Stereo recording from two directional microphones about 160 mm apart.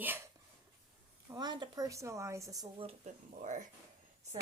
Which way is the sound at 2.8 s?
45° right (ahead or behind).